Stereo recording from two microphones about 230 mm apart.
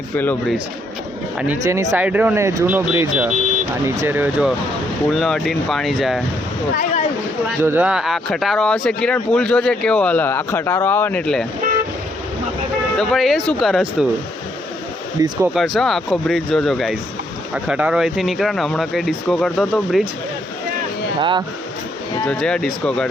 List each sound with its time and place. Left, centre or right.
0.2 s speech: centre
1.4 s speech: centre
6.7 s a sound: left
7.4 s speech: centre
13.0 s speech: centre
15.2 s speech: centre
15.5 s speech: centre
21.2 s speech: centre
22.3 s speech: centre